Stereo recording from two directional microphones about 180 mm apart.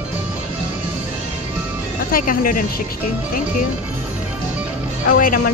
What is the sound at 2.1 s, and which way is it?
Speech, 50° left (ahead or behind).